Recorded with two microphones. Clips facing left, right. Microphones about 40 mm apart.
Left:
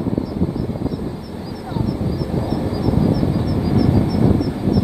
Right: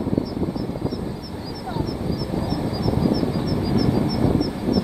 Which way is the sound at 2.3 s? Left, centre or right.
Centre.